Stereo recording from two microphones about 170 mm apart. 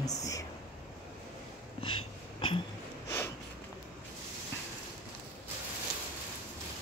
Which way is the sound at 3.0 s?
15° left (ahead or behind).